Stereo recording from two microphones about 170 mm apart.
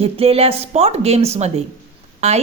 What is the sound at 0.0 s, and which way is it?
A woman's voice, 35° right (ahead or behind).